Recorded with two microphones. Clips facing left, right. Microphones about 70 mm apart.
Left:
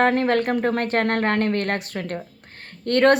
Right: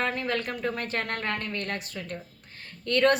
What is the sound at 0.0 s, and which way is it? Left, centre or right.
Speech, left.